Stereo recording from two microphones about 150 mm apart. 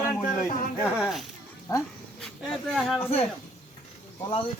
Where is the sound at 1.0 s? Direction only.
Centre (ahead or behind).